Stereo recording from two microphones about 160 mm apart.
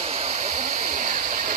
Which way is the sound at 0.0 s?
45° right (ahead or behind).